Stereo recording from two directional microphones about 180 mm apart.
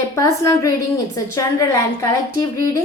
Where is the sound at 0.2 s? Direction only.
20° left (ahead or behind).